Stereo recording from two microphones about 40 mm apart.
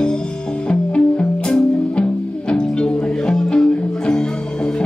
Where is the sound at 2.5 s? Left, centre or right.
Left.